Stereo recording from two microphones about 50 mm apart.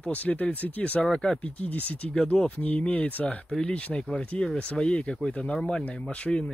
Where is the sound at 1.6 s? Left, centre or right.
Left.